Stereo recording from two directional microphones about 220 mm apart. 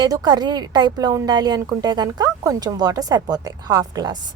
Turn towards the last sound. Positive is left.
turn(degrees=-20)  # may be behind; listen again after turning